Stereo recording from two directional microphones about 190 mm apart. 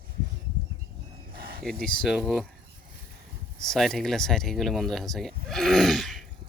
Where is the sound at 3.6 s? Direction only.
Centre (ahead or behind).